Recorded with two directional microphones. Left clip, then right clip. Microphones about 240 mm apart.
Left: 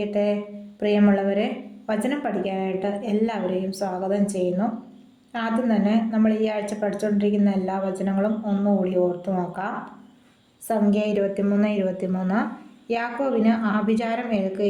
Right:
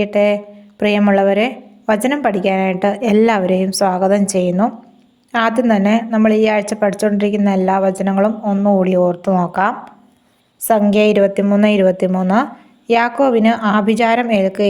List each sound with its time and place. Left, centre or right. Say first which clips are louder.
0.0 s a woman's voice: right 9 dB; right